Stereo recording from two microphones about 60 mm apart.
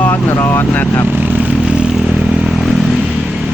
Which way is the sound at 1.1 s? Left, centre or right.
Right.